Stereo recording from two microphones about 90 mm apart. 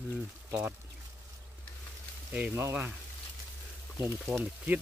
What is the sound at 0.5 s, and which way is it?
Speech, 25° right (ahead or behind).